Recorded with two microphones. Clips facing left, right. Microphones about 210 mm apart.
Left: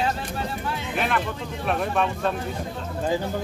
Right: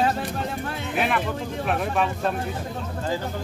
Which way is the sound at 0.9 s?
5° right (ahead or behind).